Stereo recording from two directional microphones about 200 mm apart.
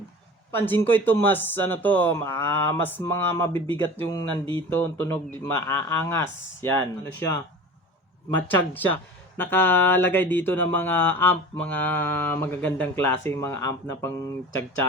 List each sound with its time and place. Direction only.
0.5 s speech: 10° left (ahead or behind)